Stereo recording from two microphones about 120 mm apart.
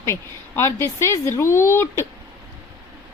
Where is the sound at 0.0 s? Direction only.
20° left (ahead or behind).